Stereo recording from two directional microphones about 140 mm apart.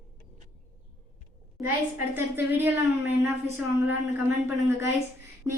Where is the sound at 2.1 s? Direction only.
15° right (ahead or behind).